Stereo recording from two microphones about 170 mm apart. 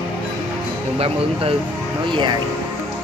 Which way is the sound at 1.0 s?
35° right (ahead or behind).